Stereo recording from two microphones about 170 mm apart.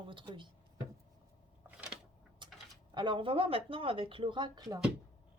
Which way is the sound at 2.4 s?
25° right (ahead or behind).